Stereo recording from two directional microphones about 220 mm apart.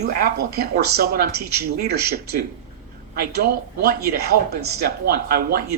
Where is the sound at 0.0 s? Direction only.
45° right (ahead or behind).